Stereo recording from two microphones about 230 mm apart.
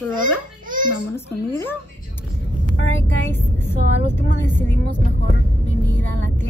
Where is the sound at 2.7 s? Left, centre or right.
Left.